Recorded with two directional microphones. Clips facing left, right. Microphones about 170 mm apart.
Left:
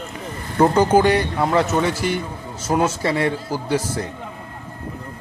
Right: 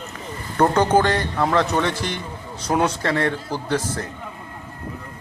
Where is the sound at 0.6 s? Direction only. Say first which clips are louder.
Left 2 dB; 10° left (ahead or behind).